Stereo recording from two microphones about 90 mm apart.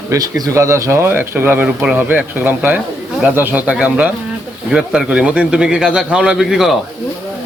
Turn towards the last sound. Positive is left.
turn(degrees=-5)  # may be behind; listen again after turning